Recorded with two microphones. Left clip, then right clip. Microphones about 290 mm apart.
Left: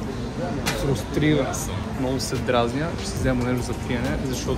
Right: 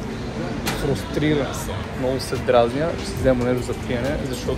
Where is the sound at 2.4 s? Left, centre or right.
Centre.